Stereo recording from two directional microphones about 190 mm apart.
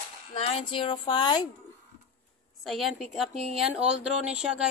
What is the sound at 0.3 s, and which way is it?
Speech, 30° left (ahead or behind).